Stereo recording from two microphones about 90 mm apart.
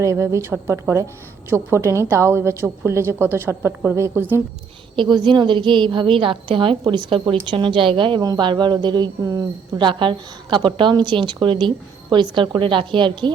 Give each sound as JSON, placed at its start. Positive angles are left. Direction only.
{"t": 0.0, "sound": "a woman's voice", "side_deg": -35}
{"t": 4.9, "sound": "a woman's voice", "side_deg": -60}
{"t": 9.7, "sound": "a woman's voice", "side_deg": -65}